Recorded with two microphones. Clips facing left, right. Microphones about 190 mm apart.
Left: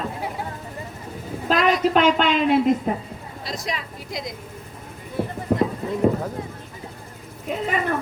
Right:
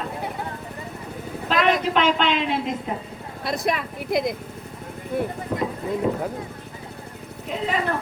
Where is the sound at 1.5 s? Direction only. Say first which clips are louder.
Left 2 dB; 40° left (ahead or behind).